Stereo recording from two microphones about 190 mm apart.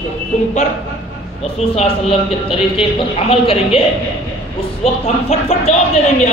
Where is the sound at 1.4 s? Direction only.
30° left (ahead or behind).